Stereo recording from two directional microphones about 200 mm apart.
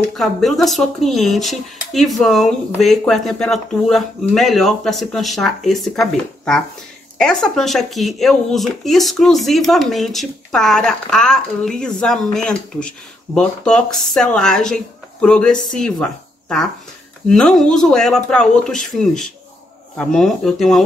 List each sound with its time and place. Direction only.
0.1 s speech: centre (ahead or behind)